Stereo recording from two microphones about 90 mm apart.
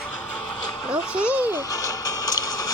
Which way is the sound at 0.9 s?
10° right (ahead or behind).